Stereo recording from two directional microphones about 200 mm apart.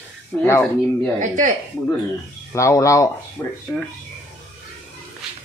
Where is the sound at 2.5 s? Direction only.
15° left (ahead or behind).